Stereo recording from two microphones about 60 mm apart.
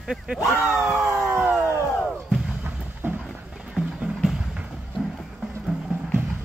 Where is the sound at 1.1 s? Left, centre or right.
Right.